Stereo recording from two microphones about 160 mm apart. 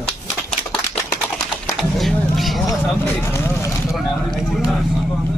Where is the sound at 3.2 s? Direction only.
15° left (ahead or behind).